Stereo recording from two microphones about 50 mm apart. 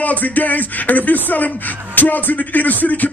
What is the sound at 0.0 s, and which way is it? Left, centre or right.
Speech, left.